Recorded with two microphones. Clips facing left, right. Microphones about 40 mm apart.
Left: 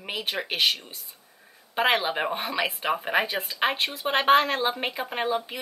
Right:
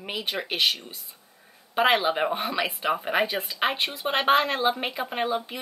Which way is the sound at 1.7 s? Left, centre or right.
Centre.